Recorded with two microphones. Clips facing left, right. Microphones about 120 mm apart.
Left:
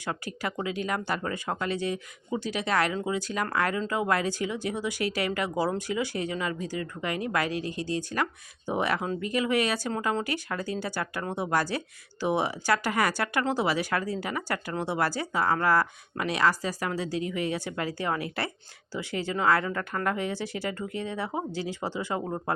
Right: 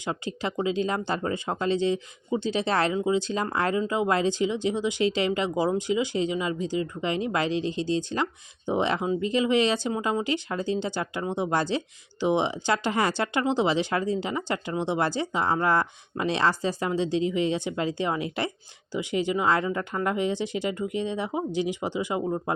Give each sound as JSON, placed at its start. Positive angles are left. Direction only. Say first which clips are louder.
{"t": 0.0, "sound": "speech", "louder": "right 3 dB", "side_deg": -20}